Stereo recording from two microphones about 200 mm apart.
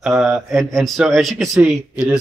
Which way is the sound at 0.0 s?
Centre (ahead or behind).